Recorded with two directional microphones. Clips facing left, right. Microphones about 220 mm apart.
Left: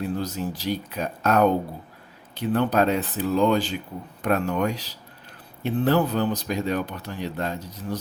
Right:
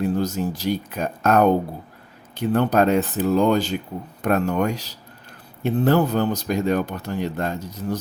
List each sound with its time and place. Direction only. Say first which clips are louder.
0.2 s speech: right 5 dB; 45° right (ahead or behind)